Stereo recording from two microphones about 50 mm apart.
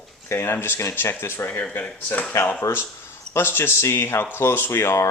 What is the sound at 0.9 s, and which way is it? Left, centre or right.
Speech, left.